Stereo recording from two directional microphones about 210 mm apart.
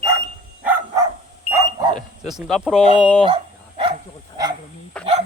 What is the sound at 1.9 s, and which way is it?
Speech, centre (ahead or behind).